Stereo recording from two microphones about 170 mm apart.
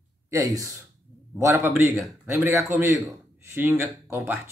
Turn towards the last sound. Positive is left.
turn(degrees=-15)  # may be behind; listen again after turning